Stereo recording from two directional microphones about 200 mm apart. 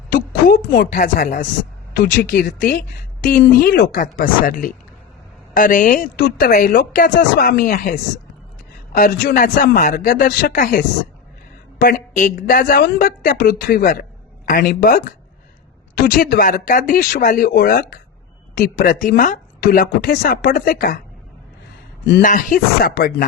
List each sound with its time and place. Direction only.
0.1 s a sound: 45° left (ahead or behind)
0.7 s speech: 40° left (ahead or behind)
1.9 s speech: 55° left (ahead or behind)
6.5 s speech: 45° left (ahead or behind)
22.2 s speech: 40° left (ahead or behind)